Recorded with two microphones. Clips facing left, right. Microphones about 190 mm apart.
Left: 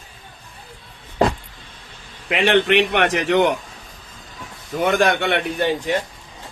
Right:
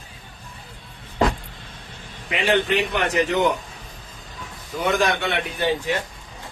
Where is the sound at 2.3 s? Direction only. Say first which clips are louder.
Left 4 dB; 75° left (ahead or behind).